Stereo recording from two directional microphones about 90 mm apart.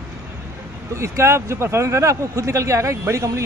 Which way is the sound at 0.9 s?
30° right (ahead or behind).